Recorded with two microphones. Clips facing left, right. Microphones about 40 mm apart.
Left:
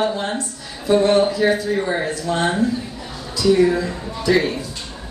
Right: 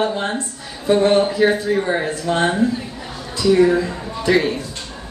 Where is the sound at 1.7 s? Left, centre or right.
Centre.